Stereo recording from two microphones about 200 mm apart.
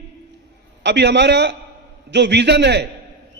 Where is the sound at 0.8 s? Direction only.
60° right (ahead or behind).